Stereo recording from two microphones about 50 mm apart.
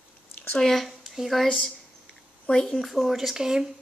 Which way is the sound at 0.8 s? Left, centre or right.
Centre.